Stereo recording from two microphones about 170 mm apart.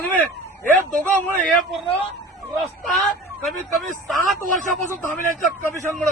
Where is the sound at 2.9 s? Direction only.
Centre (ahead or behind).